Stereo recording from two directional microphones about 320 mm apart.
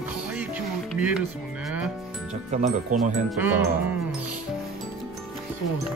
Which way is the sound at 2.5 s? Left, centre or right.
Right.